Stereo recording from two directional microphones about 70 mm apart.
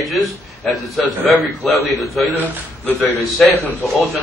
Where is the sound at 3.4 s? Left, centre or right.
Centre.